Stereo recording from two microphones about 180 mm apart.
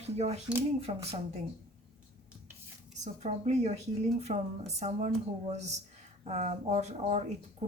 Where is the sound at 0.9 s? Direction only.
30° right (ahead or behind).